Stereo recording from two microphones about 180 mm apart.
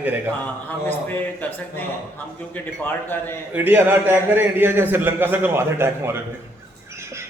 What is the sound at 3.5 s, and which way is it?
A man's voice, 10° right (ahead or behind).